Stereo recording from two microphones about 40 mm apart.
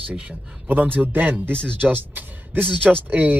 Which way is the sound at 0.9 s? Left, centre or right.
Right.